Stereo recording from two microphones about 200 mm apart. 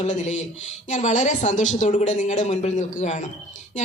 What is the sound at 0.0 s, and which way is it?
Speech, 35° left (ahead or behind).